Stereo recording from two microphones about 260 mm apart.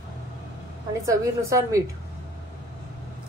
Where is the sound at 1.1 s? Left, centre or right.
Centre.